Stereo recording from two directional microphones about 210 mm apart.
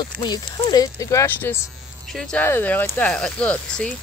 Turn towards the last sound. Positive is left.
turn(degrees=5)  # may be behind; listen again after turning